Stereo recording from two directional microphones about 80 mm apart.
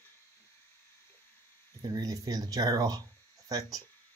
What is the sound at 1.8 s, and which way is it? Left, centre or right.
Speech, right.